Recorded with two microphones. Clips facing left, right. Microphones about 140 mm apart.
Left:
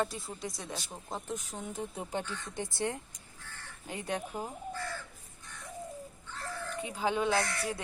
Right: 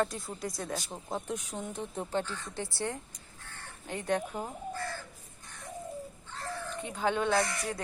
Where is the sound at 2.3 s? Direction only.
20° left (ahead or behind).